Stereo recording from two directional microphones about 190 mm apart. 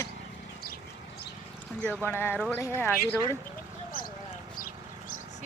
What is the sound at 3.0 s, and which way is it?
Speech, 15° right (ahead or behind).